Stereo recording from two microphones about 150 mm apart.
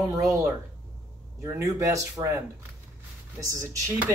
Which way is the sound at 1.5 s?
20° right (ahead or behind).